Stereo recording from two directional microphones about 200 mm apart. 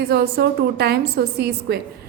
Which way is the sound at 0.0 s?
50° right (ahead or behind).